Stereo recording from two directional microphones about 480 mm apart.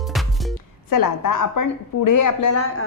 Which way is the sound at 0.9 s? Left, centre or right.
Left.